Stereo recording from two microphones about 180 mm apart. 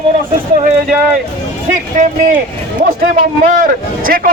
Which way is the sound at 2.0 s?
40° right (ahead or behind).